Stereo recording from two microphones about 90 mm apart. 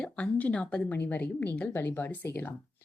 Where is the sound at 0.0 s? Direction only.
15° left (ahead or behind).